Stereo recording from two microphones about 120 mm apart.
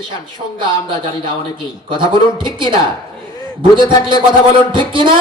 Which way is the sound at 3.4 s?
45° right (ahead or behind).